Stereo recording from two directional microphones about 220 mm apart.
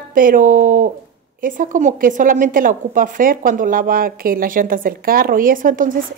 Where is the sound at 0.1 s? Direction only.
40° right (ahead or behind).